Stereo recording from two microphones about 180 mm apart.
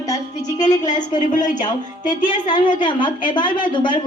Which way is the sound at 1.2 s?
45° left (ahead or behind).